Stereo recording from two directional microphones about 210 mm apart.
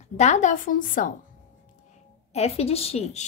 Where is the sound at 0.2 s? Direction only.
35° left (ahead or behind).